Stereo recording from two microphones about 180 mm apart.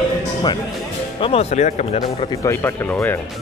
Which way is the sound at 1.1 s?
30° left (ahead or behind).